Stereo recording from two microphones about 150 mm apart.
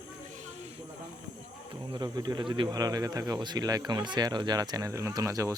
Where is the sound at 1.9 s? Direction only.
25° right (ahead or behind).